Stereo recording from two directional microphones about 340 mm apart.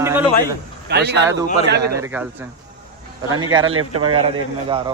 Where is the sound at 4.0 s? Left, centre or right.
Centre.